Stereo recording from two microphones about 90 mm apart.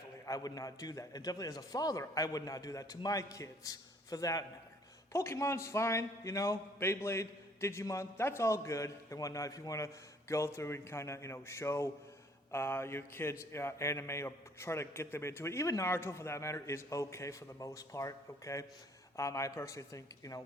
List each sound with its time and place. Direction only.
0.3 s a man's voice: 45° left (ahead or behind)
12.5 s a sound: 30° left (ahead or behind)
13.4 s a man's voice: 30° left (ahead or behind)